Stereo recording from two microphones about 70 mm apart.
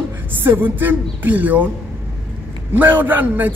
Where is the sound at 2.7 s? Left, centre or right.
Right.